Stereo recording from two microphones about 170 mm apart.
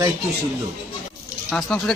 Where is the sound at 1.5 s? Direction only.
5° left (ahead or behind).